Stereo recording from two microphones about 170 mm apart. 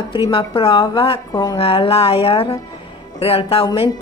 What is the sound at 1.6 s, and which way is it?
Speech, 35° left (ahead or behind).